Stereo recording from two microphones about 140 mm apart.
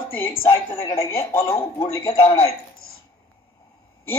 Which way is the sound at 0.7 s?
20° left (ahead or behind).